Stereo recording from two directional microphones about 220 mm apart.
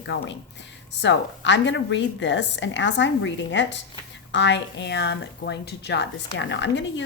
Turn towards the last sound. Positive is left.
turn(degrees=55)  # may be behind; listen again after turning